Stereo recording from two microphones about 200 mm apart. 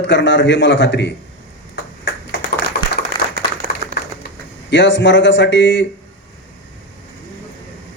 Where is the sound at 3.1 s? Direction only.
25° left (ahead or behind).